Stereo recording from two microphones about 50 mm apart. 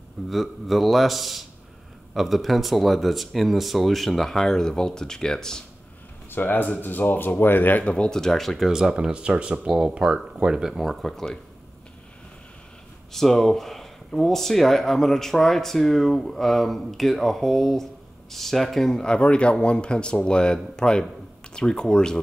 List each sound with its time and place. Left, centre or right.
0.3 s speech: centre
6.3 s speech: left
7.8 s speech: centre
13.1 s speech: centre
19.0 s speech: centre